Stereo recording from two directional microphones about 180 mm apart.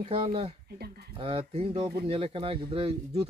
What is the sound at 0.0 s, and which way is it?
Speech, 30° right (ahead or behind).